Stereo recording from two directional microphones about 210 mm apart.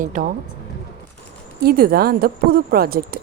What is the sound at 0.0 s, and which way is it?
Speech, 40° right (ahead or behind).